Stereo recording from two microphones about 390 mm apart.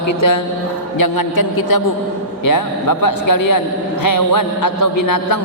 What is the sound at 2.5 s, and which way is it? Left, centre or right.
A man's voice, left.